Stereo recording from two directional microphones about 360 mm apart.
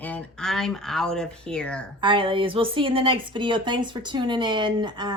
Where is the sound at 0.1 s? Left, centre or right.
Centre.